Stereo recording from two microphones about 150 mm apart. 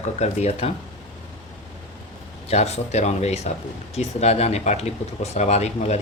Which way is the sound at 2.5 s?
45° left (ahead or behind).